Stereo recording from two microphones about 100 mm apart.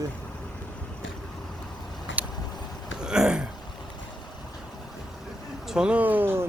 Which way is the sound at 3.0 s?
5° right (ahead or behind).